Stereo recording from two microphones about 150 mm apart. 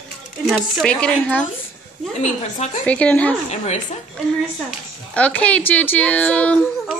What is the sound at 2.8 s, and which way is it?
Speech, 10° left (ahead or behind).